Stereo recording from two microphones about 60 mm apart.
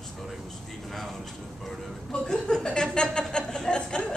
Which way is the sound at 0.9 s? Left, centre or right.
Centre.